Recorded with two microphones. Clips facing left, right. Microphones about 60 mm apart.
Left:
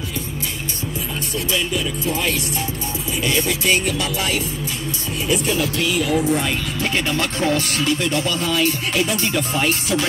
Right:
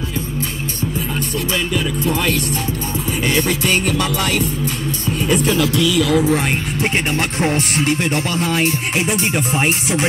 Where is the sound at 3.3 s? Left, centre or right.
Right.